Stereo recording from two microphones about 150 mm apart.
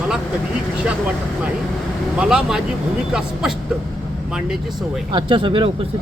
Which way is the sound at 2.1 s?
5° right (ahead or behind).